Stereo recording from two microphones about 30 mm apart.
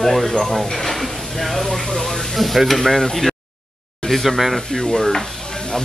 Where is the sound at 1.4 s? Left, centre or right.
Centre.